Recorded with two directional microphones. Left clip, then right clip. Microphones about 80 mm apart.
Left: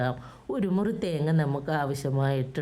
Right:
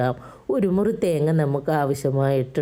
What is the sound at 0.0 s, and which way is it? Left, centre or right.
A woman's voice, right.